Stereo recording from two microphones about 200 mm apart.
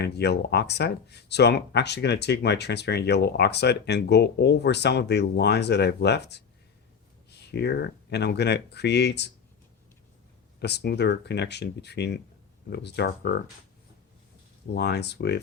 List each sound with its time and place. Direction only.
0.0 s speech: 55° left (ahead or behind)
10.6 s speech: 55° left (ahead or behind)
14.7 s speech: 55° left (ahead or behind)